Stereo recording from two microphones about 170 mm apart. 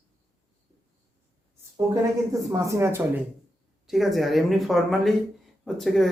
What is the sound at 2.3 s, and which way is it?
Speech, 20° right (ahead or behind).